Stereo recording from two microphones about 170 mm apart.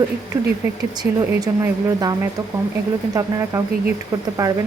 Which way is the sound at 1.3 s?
20° right (ahead or behind).